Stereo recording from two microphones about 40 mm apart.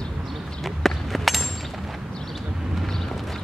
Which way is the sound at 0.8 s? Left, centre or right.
Centre.